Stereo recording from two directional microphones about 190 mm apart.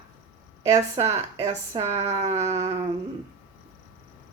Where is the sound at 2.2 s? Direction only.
35° right (ahead or behind).